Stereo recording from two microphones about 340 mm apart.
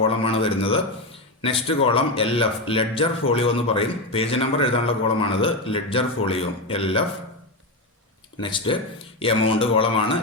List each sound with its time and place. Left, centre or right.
0.0 s a sound: centre
1.4 s speech: centre
8.4 s speech: centre